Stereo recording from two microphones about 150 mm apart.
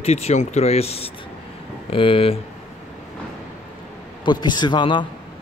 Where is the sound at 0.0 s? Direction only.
45° left (ahead or behind).